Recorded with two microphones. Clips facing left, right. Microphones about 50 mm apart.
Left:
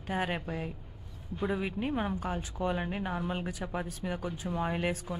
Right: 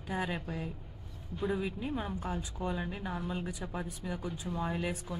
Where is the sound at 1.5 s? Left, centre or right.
Left.